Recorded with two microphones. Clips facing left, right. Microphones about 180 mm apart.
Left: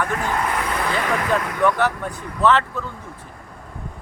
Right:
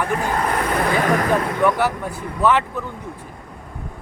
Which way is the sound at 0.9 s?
50° right (ahead or behind).